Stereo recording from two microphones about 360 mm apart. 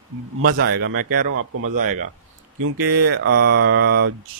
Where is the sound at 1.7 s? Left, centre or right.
Right.